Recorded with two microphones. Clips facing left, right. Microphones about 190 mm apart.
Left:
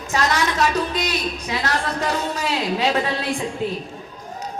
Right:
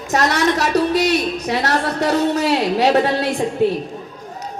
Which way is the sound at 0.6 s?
40° right (ahead or behind).